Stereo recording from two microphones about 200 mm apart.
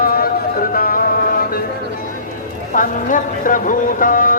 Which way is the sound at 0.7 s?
45° left (ahead or behind).